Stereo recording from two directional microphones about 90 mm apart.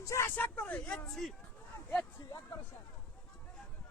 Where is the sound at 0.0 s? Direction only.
35° left (ahead or behind).